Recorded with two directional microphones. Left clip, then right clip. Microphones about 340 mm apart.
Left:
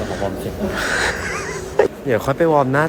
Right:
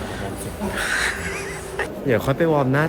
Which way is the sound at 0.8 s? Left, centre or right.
Centre.